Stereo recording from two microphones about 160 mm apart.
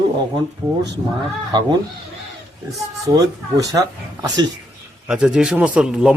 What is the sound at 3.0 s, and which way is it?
Speech, 20° right (ahead or behind).